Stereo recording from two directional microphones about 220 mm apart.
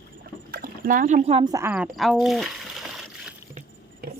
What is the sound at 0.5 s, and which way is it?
Speech, 40° right (ahead or behind).